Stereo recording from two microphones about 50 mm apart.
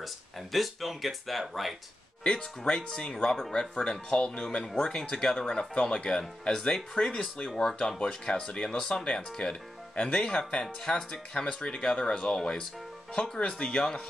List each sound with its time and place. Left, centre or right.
0.0 s speech: centre
2.2 s speech: centre